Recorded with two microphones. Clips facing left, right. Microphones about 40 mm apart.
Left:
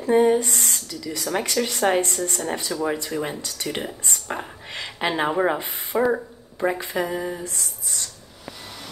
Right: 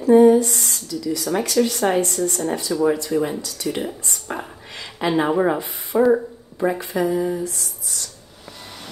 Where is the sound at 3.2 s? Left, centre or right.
Left.